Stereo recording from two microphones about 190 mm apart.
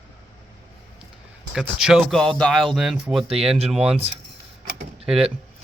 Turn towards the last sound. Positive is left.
turn(degrees=-5)  # may be behind; listen again after turning